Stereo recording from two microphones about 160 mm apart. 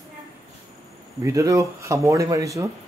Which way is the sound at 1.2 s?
20° right (ahead or behind).